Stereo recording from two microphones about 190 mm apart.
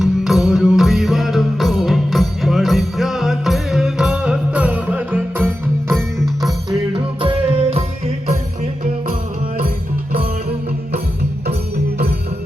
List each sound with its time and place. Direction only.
0.0 s music: centre (ahead or behind)
5.4 s music: 5° left (ahead or behind)
6.9 s music: 30° right (ahead or behind)
9.6 s music: 50° right (ahead or behind)